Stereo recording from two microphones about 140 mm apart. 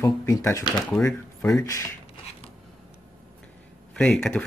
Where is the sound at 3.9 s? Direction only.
5° left (ahead or behind).